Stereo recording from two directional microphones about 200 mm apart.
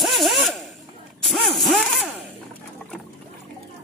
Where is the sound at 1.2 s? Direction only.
Centre (ahead or behind).